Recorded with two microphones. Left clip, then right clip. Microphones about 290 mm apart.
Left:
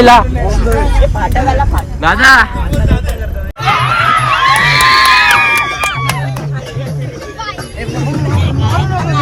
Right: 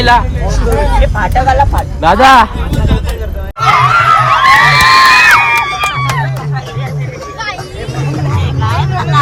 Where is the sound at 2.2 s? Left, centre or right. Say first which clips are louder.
Even; centre.